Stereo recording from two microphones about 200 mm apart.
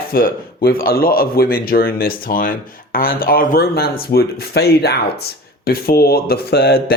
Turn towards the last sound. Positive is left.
turn(degrees=50)  # may be behind; listen again after turning